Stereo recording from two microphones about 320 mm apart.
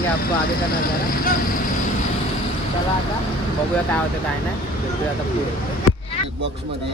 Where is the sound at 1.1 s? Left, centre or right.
Left.